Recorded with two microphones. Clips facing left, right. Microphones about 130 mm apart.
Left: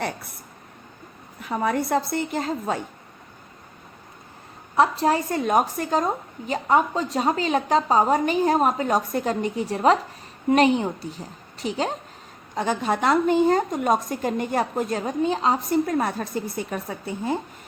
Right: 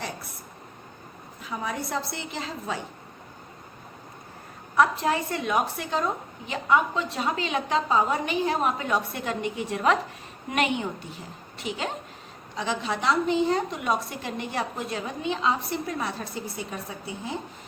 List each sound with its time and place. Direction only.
1.4 s a woman's voice: 55° left (ahead or behind)
4.8 s a woman's voice: 35° left (ahead or behind)
12.5 s a woman's voice: 50° left (ahead or behind)